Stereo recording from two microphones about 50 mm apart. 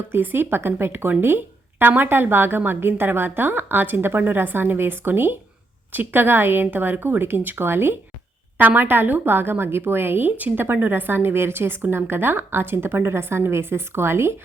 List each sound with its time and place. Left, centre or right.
0.1 s a woman's voice: right
8.5 s a woman's voice: right